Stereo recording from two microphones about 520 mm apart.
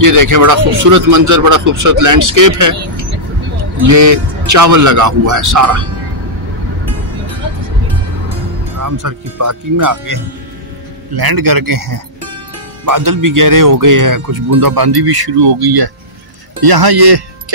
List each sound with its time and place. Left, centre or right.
0.0 s speech: right
8.7 s speech: right